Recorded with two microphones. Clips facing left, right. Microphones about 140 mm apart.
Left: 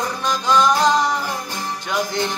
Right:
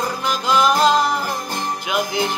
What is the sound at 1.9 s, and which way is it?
Music, 10° right (ahead or behind).